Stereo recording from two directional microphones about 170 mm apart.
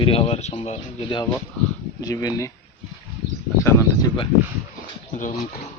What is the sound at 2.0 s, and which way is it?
Speech, 20° left (ahead or behind).